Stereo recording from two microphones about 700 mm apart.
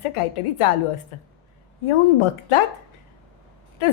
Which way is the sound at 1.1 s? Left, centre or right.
Left.